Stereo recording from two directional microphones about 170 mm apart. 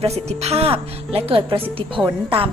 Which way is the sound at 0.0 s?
40° right (ahead or behind).